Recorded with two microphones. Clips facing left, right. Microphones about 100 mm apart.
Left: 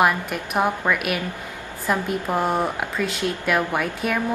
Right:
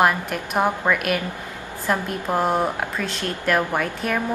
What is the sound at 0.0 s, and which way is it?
A woman's voice, centre (ahead or behind).